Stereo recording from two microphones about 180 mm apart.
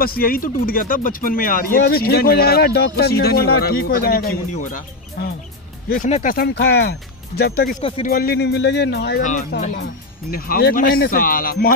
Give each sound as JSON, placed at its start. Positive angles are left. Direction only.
{"t": 0.0, "sound": "speech", "side_deg": 55}
{"t": 5.9, "sound": "speech", "side_deg": 50}
{"t": 7.8, "sound": "speech", "side_deg": 30}
{"t": 8.1, "sound": "speech", "side_deg": 60}
{"t": 10.3, "sound": "speech", "side_deg": 55}